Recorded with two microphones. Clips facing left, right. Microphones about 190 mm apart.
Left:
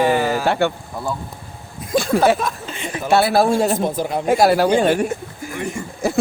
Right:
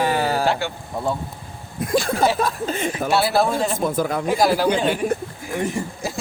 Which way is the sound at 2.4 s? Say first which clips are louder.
Right 4 dB; 35° right (ahead or behind).